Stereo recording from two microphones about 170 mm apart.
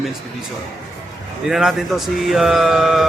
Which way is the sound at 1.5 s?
Centre (ahead or behind).